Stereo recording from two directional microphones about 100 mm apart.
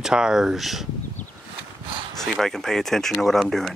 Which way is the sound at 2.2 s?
5° left (ahead or behind).